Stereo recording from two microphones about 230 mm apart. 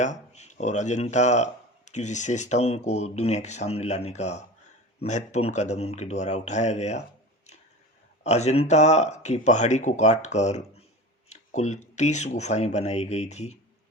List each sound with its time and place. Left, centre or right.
0.0 s speech: left
8.2 s speech: left